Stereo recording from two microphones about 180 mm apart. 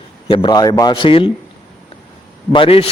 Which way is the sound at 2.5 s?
30° left (ahead or behind).